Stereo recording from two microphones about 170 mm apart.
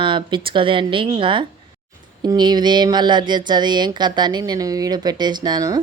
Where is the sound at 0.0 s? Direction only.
30° right (ahead or behind).